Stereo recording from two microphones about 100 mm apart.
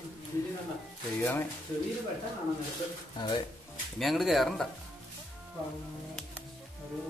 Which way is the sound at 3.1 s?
50° left (ahead or behind).